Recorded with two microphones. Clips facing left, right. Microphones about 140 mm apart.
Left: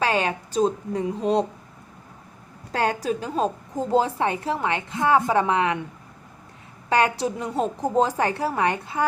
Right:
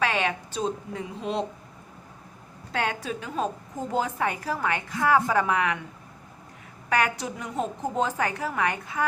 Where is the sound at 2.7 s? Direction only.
40° left (ahead or behind).